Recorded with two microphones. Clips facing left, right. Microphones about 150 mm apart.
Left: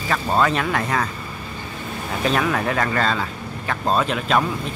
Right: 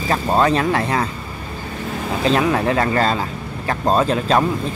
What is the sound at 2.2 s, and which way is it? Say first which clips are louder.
Speech: right 4 dB; 30° right (ahead or behind).